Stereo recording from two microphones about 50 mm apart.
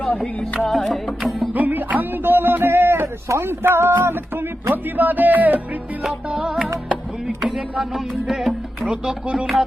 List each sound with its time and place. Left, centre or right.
0.6 s music: centre
1.5 s music: right
3.4 s speech: right
4.7 s speech: right
6.1 s music: centre
7.3 s a sound: centre
7.9 s music: centre
8.9 s speech: centre